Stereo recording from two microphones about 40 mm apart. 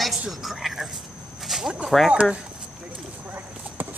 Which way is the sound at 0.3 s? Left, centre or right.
Centre.